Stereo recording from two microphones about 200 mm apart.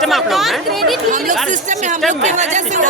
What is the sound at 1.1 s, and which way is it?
Speech, 40° right (ahead or behind).